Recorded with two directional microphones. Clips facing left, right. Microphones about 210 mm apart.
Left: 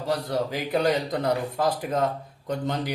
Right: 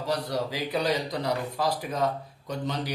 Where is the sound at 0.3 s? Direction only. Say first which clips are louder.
Left 3 dB; 50° left (ahead or behind).